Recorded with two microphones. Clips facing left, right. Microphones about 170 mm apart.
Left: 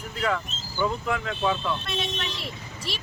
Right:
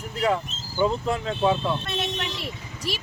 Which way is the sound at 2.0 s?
45° right (ahead or behind).